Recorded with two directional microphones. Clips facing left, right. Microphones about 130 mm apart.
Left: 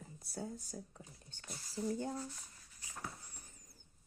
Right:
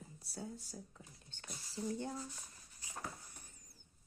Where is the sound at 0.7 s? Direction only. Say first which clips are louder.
Left 3 dB; 35° left (ahead or behind).